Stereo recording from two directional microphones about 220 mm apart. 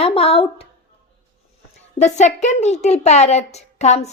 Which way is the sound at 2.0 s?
30° left (ahead or behind).